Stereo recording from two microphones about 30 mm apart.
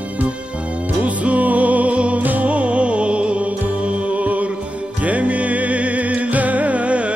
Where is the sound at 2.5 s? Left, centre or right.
Right.